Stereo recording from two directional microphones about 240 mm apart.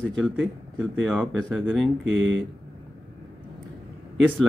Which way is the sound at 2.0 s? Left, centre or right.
Right.